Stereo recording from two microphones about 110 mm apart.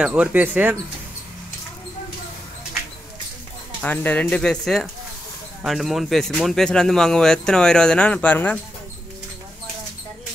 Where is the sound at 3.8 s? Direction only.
15° left (ahead or behind).